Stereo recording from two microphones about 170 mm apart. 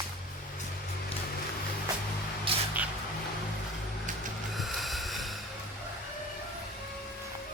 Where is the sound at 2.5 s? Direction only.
30° right (ahead or behind).